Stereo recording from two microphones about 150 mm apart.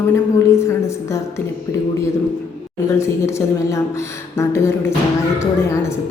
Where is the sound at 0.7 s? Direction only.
20° left (ahead or behind).